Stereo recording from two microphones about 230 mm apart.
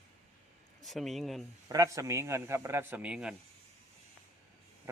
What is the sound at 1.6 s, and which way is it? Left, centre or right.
A man's voice, centre.